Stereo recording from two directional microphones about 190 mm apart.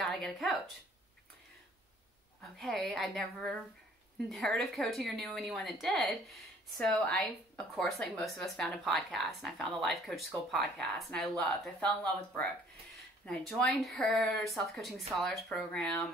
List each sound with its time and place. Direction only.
0.0 s speech: centre (ahead or behind)
2.6 s a woman's voice: centre (ahead or behind)